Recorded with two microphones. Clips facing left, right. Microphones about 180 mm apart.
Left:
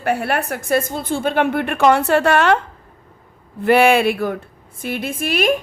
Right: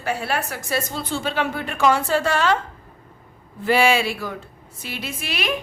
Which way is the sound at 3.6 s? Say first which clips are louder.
Left 5 dB; 60° left (ahead or behind).